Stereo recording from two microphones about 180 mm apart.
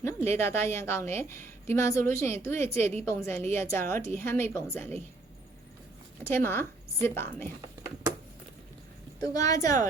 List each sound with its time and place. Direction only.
0.3 s a woman's voice: 15° left (ahead or behind)
6.3 s a woman's voice: 10° left (ahead or behind)
9.2 s speech: 20° left (ahead or behind)